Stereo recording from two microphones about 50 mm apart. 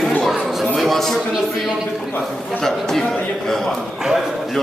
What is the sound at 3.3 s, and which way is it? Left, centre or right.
Speech, centre.